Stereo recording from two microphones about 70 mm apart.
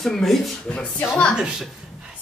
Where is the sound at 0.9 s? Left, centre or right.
Centre.